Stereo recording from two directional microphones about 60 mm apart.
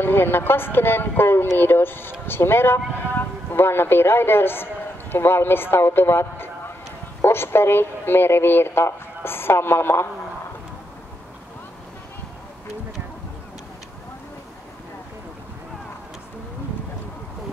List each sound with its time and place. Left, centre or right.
0.0 s speech: left